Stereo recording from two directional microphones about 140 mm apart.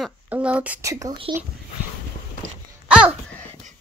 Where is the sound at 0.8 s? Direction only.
20° right (ahead or behind).